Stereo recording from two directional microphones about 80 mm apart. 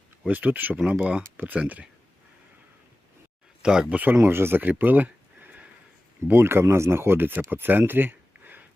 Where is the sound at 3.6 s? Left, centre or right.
Centre.